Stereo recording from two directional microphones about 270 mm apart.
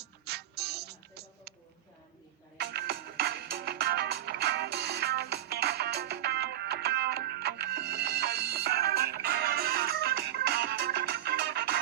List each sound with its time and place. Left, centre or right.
0.0 s music: right
2.6 s music: right